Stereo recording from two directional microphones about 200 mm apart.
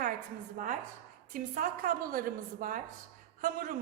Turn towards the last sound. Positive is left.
turn(degrees=-45)  # may be behind; listen again after turning